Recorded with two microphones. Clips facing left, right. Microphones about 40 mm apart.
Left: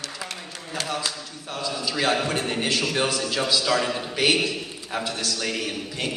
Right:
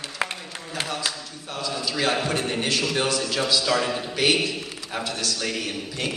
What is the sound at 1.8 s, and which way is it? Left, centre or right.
A man's voice, centre.